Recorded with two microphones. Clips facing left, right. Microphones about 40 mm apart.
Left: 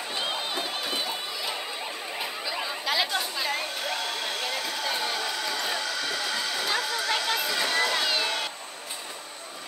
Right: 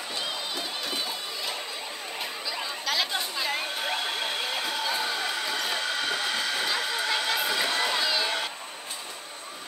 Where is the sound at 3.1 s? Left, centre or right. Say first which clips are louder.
Left 1 dB; centre.